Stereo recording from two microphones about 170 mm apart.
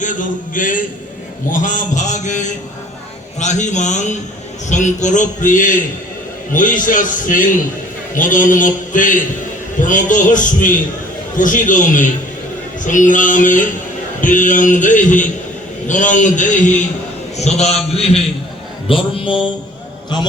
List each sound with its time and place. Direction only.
0.0 s a man's voice: 50° left (ahead or behind); by 19.4 s 30° left (ahead or behind)